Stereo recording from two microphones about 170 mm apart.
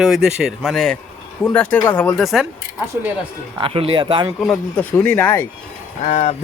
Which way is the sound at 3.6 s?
35° right (ahead or behind).